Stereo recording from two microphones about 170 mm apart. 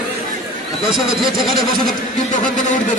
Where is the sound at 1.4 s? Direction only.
Centre (ahead or behind).